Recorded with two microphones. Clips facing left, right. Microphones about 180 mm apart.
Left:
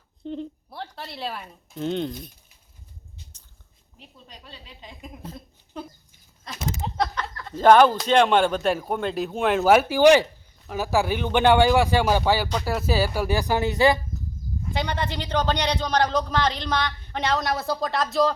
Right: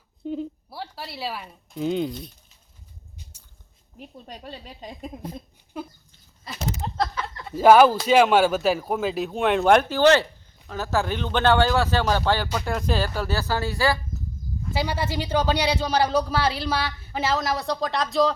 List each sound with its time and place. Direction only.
0.3 s speech: 5° right (ahead or behind)
3.9 s speech: 50° right (ahead or behind)
5.2 s speech: 10° right (ahead or behind)
6.8 s a sound: centre (ahead or behind)
7.4 s speech: 10° right (ahead or behind); by 14.0 s 20° left (ahead or behind)
14.7 s a man's voice: 5° right (ahead or behind)